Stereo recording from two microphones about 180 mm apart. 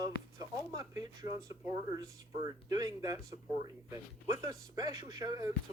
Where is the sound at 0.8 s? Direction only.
20° right (ahead or behind).